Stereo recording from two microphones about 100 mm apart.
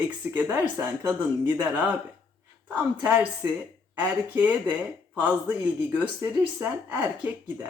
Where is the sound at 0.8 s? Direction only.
25° right (ahead or behind).